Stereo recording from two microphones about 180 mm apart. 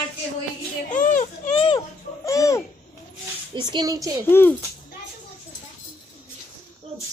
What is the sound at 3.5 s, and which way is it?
Speech, 25° right (ahead or behind).